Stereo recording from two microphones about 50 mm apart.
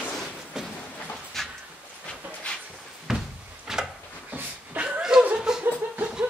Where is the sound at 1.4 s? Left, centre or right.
Centre.